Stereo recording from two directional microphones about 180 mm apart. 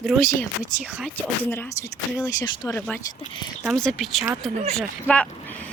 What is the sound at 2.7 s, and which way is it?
Speech, 10° left (ahead or behind).